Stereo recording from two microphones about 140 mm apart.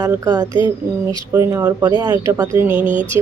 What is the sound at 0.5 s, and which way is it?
Speech, 15° right (ahead or behind).